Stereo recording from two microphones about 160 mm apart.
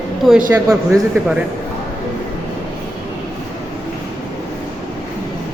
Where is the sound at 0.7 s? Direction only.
20° right (ahead or behind).